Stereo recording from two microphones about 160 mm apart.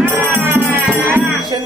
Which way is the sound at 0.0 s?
15° right (ahead or behind).